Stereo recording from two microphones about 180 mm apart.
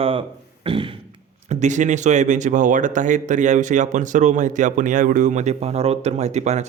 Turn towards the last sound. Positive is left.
turn(degrees=-40)  # may be behind; listen again after turning